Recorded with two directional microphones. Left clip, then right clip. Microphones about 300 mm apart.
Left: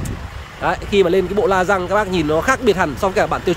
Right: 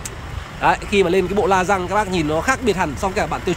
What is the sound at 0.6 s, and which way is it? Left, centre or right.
Speech, centre.